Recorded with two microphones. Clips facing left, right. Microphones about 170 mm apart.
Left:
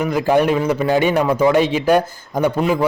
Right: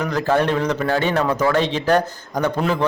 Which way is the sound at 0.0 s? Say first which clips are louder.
Left 3 dB; 10° left (ahead or behind).